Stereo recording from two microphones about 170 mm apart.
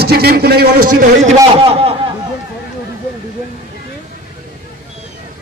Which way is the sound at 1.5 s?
35° right (ahead or behind).